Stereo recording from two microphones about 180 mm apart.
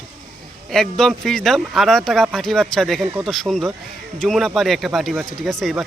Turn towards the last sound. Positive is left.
turn(degrees=0)  # may be behind; listen again after turning